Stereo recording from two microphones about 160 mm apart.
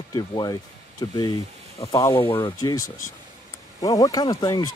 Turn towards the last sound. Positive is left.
turn(degrees=25)  # may be behind; listen again after turning